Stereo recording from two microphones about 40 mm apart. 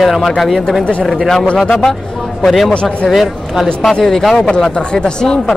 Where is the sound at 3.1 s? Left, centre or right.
Centre.